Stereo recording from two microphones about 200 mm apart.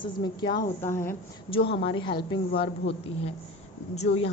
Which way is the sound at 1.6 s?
25° left (ahead or behind).